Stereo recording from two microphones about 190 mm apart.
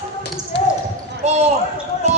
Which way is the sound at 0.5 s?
65° left (ahead or behind).